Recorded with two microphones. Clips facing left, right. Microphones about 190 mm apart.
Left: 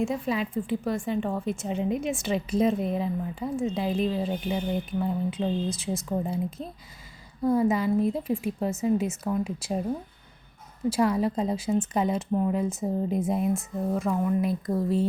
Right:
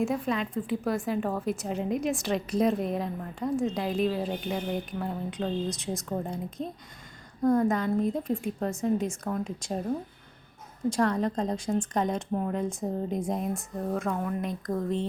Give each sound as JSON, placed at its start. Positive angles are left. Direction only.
{"t": 0.0, "sound": "speech", "side_deg": 0}
{"t": 10.8, "sound": "speech", "side_deg": 5}